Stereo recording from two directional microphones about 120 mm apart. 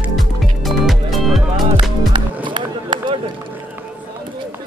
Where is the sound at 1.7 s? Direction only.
40° right (ahead or behind).